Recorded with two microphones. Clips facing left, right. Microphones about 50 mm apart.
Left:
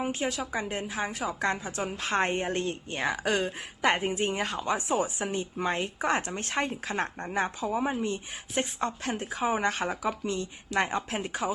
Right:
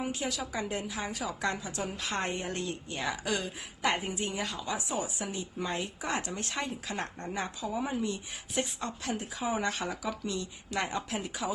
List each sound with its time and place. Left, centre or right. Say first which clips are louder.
0.0 s a woman's voice: left 4 dB; left